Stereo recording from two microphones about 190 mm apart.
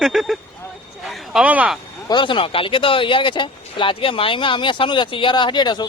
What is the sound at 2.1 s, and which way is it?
Speech, 25° left (ahead or behind).